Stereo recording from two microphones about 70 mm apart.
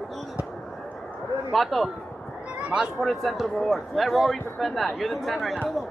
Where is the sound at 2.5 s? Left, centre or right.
Centre.